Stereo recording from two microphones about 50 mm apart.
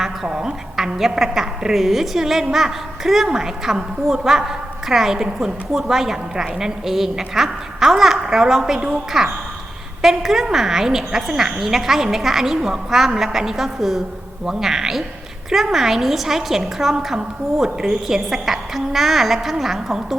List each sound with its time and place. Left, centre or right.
0.3 s a woman's voice: centre
0.8 s a woman's voice: centre